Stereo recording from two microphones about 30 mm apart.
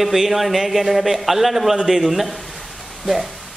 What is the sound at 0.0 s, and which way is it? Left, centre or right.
Speech, centre.